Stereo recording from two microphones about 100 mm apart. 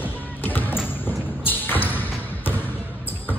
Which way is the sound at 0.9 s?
20° left (ahead or behind).